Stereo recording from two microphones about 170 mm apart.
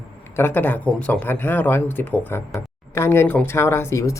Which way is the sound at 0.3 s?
10° left (ahead or behind).